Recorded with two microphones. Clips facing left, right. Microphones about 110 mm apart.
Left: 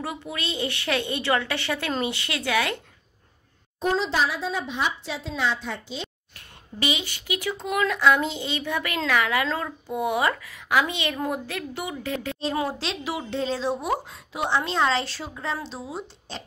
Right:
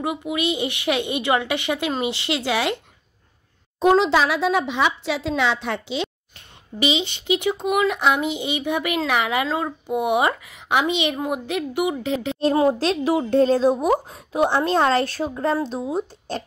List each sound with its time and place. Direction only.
0.3 s a woman's voice: 15° right (ahead or behind)
3.8 s speech: 80° right
6.3 s a woman's voice: 20° right (ahead or behind)
12.7 s a woman's voice: 45° right (ahead or behind)